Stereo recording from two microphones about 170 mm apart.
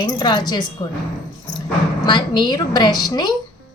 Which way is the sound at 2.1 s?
25° left (ahead or behind).